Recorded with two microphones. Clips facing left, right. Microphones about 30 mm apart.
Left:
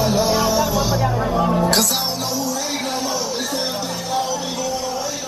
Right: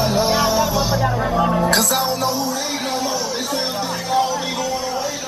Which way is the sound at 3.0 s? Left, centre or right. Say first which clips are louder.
Right 1 dB; right.